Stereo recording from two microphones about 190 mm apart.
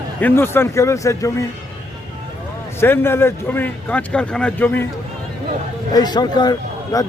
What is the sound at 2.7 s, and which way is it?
A man's voice, 10° left (ahead or behind).